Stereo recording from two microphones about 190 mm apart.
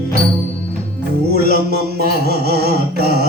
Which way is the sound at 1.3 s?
55° right (ahead or behind).